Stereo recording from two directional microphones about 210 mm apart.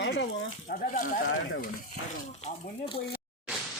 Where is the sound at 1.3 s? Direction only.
55° left (ahead or behind).